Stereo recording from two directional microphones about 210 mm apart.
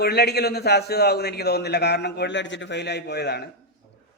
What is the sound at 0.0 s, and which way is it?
A man's voice, 50° left (ahead or behind).